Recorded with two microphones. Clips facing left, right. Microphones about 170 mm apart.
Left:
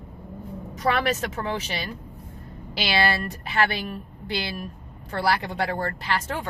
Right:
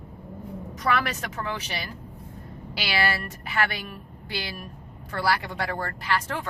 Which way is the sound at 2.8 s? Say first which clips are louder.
Left 3 dB; 25° left (ahead or behind).